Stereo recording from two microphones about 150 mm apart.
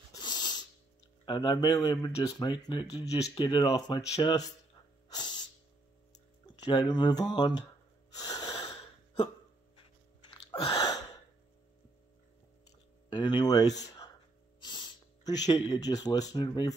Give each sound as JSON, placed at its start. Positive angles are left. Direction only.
{"t": 0.1, "sound": "music", "side_deg": 25}
{"t": 1.2, "sound": "speech", "side_deg": 30}
{"t": 5.1, "sound": "music", "side_deg": 30}
{"t": 6.4, "sound": "speech", "side_deg": 30}
{"t": 8.2, "sound": "wheeze", "side_deg": 25}
{"t": 8.5, "sound": "wheeze", "side_deg": 40}
{"t": 10.3, "sound": "a sound", "side_deg": 35}
{"t": 13.1, "sound": "speech", "side_deg": 30}